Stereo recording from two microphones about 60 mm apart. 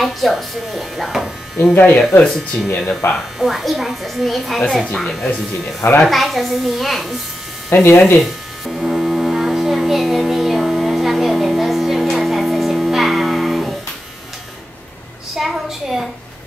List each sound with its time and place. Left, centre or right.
0.0 s speech: centre
1.8 s speech: left
2.2 s speech: centre
3.1 s speech: centre
7.7 s speech: left
8.2 s foghorn: centre
15.3 s a sound: centre